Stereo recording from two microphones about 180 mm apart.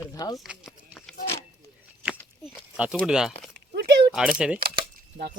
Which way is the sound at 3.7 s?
65° right (ahead or behind).